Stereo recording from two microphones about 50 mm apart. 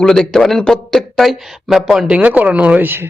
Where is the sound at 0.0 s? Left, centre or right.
Centre.